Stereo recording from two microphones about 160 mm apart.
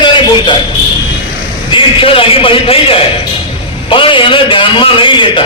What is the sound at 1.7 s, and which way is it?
A man's voice, 35° left (ahead or behind).